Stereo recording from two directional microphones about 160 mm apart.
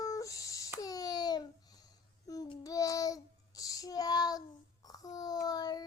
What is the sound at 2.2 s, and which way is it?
Child singing, 25° left (ahead or behind).